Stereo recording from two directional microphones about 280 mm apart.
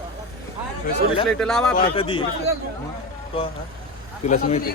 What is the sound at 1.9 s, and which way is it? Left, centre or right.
Speech, centre.